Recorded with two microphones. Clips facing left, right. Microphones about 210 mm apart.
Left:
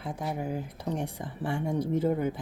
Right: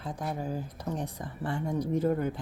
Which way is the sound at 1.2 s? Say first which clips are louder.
Left 1 dB; 10° left (ahead or behind).